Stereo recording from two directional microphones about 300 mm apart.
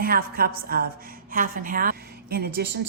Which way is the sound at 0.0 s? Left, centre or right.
Right.